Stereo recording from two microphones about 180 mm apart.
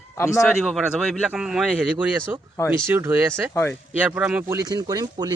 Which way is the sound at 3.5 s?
15° left (ahead or behind).